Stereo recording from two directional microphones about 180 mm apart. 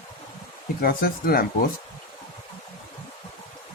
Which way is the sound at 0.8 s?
55° left (ahead or behind).